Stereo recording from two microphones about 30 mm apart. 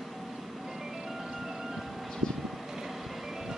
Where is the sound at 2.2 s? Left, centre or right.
Left.